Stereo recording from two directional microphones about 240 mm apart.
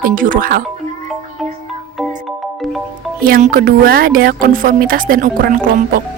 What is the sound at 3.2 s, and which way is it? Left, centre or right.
Speech, right.